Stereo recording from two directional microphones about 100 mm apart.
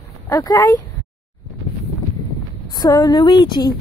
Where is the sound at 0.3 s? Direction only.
40° left (ahead or behind).